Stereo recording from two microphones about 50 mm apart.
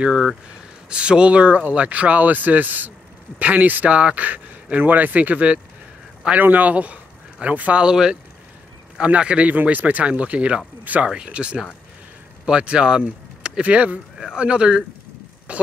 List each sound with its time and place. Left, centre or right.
0.0 s speech: centre
7.8 s speech: centre; by 11.1 s right
11.2 s speech: right
13.0 s speech: right